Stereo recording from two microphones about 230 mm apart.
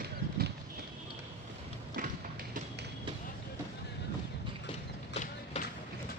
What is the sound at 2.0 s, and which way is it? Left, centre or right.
Music, right.